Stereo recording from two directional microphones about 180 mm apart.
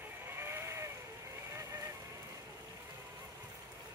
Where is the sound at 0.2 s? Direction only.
15° right (ahead or behind).